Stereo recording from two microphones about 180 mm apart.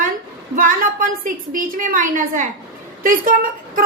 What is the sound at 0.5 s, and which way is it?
A woman's voice, 50° right (ahead or behind).